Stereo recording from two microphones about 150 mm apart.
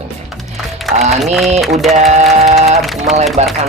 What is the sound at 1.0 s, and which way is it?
Speech, 45° right (ahead or behind).